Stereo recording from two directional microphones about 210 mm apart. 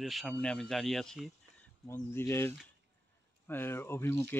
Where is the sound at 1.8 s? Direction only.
10° left (ahead or behind).